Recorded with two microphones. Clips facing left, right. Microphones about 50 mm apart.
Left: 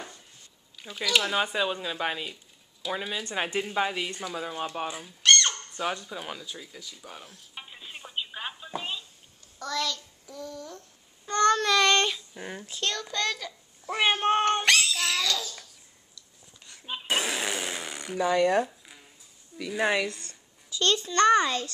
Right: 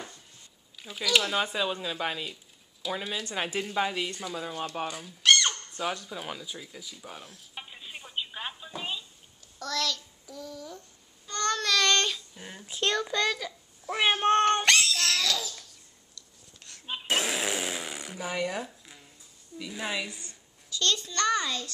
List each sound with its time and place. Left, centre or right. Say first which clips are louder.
0.7 s speech: even; centre
5.2 s a sound: even; centre
9.6 s child singing: left 1 dB; centre
11.2 s child singing: left 6 dB; left
12.4 s a child's voice: left 6 dB; left
12.6 s child singing: right 5 dB; centre
16.2 s fart: right 1 dB; centre
18.1 s speech: left 10 dB; left
19.8 s a woman's voice: left 8 dB; left
20.1 s speech: left 5 dB; centre
20.7 s a child's voice: left 4 dB; left